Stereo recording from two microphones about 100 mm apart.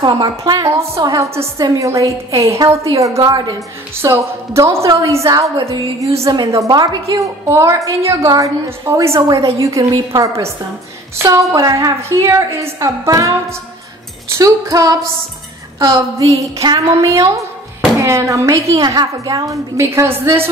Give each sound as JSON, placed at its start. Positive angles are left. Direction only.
{"t": 0.0, "sound": "a woman's voice", "side_deg": -45}
{"t": 0.7, "sound": "a woman's voice", "side_deg": -30}
{"t": 16.2, "sound": "a woman's voice", "side_deg": -30}